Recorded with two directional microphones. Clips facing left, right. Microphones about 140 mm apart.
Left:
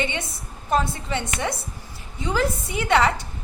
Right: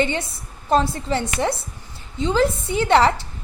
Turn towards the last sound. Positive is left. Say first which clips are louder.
# right 4 dB
turn(degrees=-30)  # may be behind; listen again after turning